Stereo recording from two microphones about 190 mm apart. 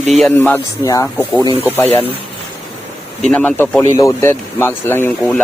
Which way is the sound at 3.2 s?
5° left (ahead or behind).